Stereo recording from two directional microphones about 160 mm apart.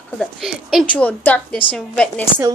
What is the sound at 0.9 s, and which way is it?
A woman's voice, 10° left (ahead or behind).